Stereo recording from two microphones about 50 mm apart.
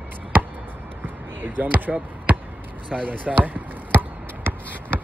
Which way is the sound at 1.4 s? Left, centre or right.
Right.